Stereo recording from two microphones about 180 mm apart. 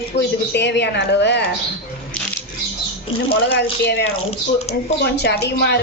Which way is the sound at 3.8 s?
65° left (ahead or behind).